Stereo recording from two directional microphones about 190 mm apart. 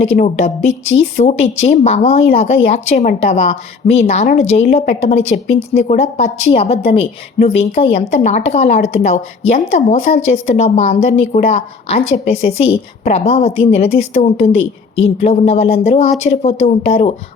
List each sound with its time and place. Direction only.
0.0 s a woman's voice: 35° left (ahead or behind)